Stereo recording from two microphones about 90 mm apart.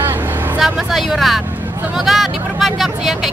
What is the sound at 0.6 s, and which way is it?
Speech, centre (ahead or behind).